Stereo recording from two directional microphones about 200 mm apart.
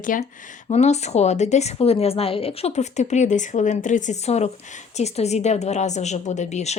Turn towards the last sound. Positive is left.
turn(degrees=35)  # may be behind; listen again after turning